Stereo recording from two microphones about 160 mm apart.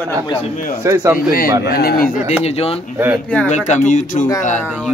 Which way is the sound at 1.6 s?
80° left.